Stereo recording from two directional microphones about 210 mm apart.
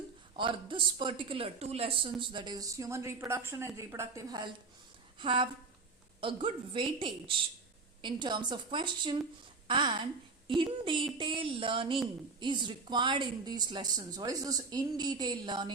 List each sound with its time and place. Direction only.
0.3 s a woman's voice: 25° right (ahead or behind)